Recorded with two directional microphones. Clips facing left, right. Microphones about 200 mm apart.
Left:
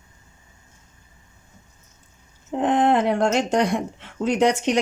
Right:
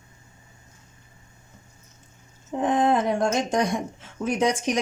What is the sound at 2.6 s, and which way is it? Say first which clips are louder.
Speech: left 3 dB; 65° left (ahead or behind).